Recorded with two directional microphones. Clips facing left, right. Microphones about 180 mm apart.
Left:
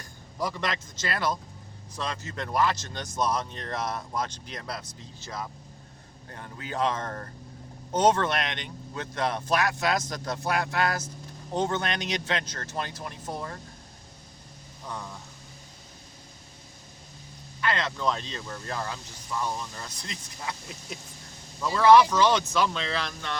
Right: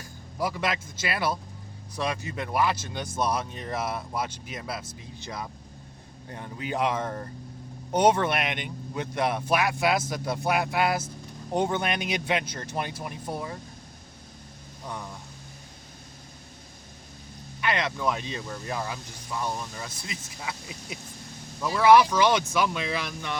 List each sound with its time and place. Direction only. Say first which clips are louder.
0.0 s a man's voice: right 2 dB; 5° right (ahead or behind)
4.9 s speech: right 2 dB; 15° right (ahead or behind)
17.6 s speech: right 1 dB; 15° right (ahead or behind)